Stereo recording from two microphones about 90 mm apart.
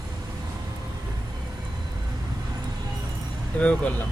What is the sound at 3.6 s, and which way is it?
Speech, 15° left (ahead or behind).